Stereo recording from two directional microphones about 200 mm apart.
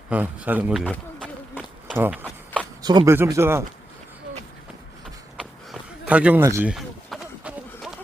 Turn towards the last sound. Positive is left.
turn(degrees=0)  # may be behind; listen again after turning